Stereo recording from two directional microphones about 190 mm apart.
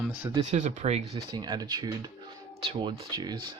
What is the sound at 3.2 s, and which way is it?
Speech, 20° right (ahead or behind).